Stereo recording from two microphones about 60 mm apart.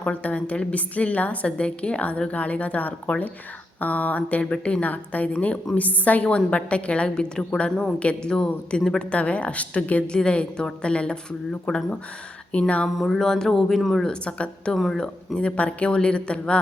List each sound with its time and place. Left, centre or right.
0.0 s a woman's voice: left
13.0 s speech: centre
14.0 s a woman's voice: centre
14.7 s a woman's voice: centre